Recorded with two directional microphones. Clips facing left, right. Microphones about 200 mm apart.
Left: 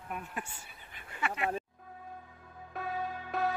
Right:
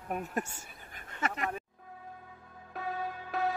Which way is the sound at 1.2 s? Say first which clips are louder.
Even; 40° right (ahead or behind).